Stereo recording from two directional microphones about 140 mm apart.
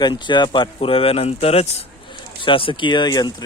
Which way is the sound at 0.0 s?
35° left (ahead or behind).